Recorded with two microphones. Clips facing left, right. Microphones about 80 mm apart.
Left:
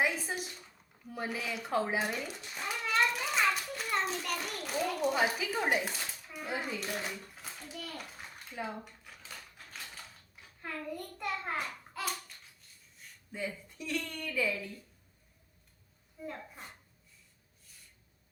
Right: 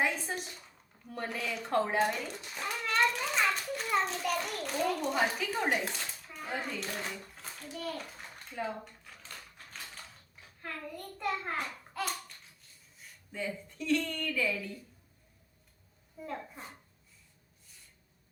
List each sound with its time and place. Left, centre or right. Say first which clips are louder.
0.0 s a woman's voice: even; centre
7.3 s bathtub: right 2 dB; centre
10.6 s a child's voice: left 2 dB; centre
13.7 s speech: right 7 dB; centre
16.2 s speech: right 2 dB; centre